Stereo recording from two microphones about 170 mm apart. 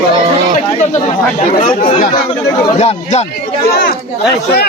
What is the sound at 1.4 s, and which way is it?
Speech, 50° left (ahead or behind).